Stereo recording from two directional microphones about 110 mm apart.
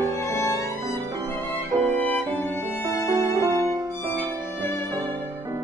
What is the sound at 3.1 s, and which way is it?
Music, 25° right (ahead or behind).